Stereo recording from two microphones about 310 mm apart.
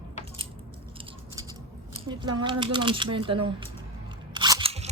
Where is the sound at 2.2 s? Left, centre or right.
Centre.